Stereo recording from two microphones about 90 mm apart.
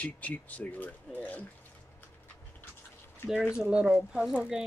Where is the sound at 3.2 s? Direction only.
10° right (ahead or behind).